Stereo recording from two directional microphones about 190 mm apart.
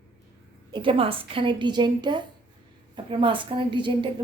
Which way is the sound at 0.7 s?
25° right (ahead or behind).